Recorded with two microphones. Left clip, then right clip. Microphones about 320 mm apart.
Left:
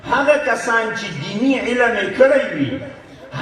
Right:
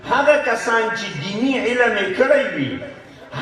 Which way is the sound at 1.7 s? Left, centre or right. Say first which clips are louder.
Left 1 dB; right.